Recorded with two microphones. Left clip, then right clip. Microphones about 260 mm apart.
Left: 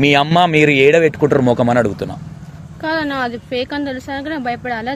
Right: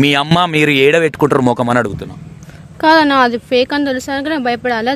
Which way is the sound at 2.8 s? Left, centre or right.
Right.